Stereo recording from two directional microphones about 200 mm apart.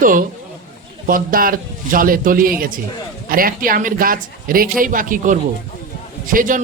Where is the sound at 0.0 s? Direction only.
45° right (ahead or behind).